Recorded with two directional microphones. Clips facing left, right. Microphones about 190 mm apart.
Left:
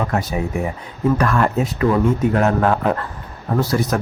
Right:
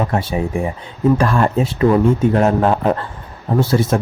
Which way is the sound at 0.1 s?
30° right (ahead or behind).